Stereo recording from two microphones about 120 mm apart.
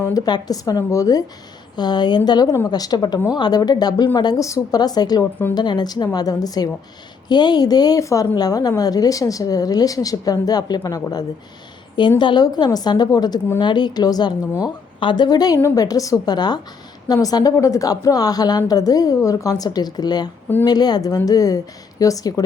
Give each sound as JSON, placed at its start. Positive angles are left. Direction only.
{"t": 0.0, "sound": "a woman's voice", "side_deg": 30}